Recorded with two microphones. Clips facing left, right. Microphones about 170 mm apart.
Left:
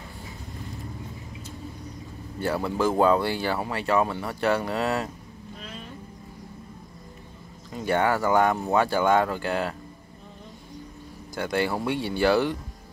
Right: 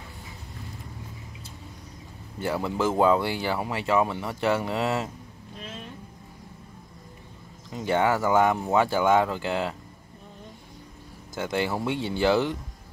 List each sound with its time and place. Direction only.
2.4 s speech: 15° right (ahead or behind)
7.7 s speech: 20° right (ahead or behind)
11.3 s speech: 20° right (ahead or behind)